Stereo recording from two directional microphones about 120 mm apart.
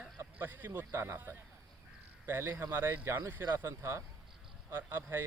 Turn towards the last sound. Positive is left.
turn(degrees=-20)  # may be behind; listen again after turning